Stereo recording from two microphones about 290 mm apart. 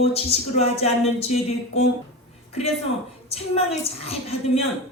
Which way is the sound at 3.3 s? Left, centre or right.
Centre.